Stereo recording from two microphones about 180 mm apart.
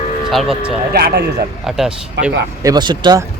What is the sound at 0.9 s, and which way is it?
Speech, 60° right (ahead or behind).